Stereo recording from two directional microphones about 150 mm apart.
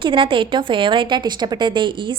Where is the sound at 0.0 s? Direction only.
35° right (ahead or behind).